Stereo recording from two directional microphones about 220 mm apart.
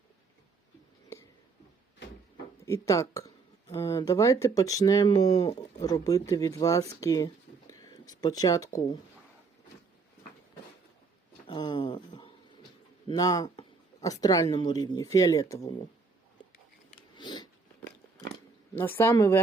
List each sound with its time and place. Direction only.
2.6 s speech: 15° left (ahead or behind)
11.4 s a sound: 20° left (ahead or behind)
13.1 s speech: 15° left (ahead or behind)
17.2 s biting: 20° left (ahead or behind)
18.8 s speech: 10° left (ahead or behind)